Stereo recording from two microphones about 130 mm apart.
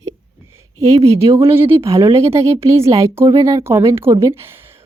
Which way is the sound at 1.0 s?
50° right (ahead or behind).